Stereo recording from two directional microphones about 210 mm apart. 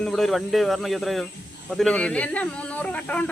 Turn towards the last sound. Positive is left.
turn(degrees=5)  # may be behind; listen again after turning